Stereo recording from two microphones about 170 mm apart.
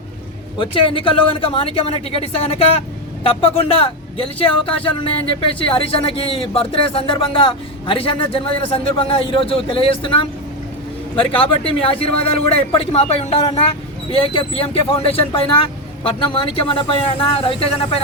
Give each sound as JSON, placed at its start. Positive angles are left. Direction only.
{"t": 0.6, "sound": "speech", "side_deg": 30}
{"t": 11.3, "sound": "speech", "side_deg": 30}